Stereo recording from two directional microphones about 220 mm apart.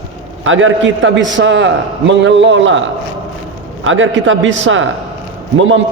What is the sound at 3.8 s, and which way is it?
A man's voice, 60° right (ahead or behind).